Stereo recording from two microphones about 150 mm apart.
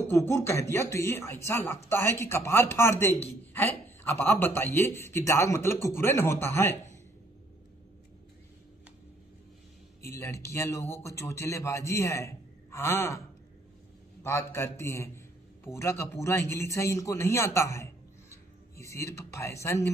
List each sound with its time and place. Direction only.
0.0 s speech: 15° left (ahead or behind)
10.0 s a man's voice: 20° left (ahead or behind)
14.2 s a man's voice: 20° left (ahead or behind)
18.3 s music: 20° left (ahead or behind)